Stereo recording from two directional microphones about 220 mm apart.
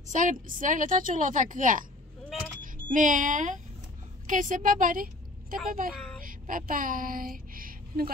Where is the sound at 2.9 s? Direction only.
35° right (ahead or behind).